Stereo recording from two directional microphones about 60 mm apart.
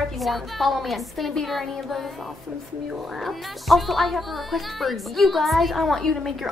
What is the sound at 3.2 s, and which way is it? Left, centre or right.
A woman's voice, centre.